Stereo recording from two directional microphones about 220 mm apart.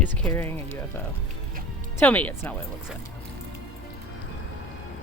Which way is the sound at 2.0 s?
5° left (ahead or behind).